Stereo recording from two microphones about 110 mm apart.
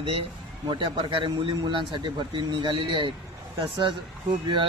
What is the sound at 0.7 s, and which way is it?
Speech, 50° right (ahead or behind).